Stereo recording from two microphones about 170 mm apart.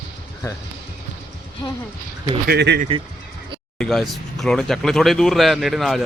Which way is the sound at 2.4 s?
75° right (ahead or behind).